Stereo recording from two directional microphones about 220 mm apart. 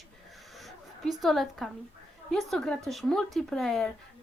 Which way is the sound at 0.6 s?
Centre (ahead or behind).